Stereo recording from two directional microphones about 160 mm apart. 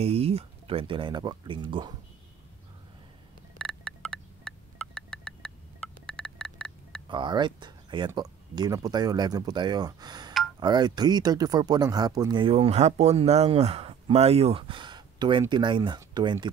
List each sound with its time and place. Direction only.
0.0 s speech: 40° right (ahead or behind)
3.5 s a sound: 5° left (ahead or behind)
6.0 s telephone dialing: 5° left (ahead or behind)
7.1 s speech: 30° right (ahead or behind)